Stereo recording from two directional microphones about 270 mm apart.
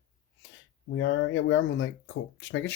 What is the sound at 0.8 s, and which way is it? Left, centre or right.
Speech, left.